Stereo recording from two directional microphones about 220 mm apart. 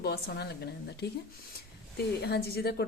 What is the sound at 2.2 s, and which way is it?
Speech, 45° left (ahead or behind).